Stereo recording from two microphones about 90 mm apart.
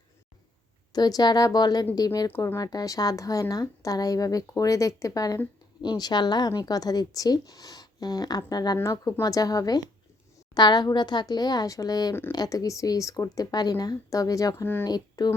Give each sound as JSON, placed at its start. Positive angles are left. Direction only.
{"t": 0.9, "sound": "speech", "side_deg": 50}
{"t": 2.2, "sound": "speech", "side_deg": 25}
{"t": 2.6, "sound": "speech", "side_deg": 45}
{"t": 8.8, "sound": "speech", "side_deg": 30}
{"t": 9.2, "sound": "speech", "side_deg": 45}
{"t": 14.6, "sound": "speech", "side_deg": 25}
{"t": 14.8, "sound": "speech", "side_deg": 50}